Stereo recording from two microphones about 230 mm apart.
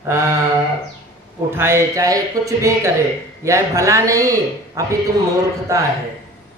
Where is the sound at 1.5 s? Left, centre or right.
Centre.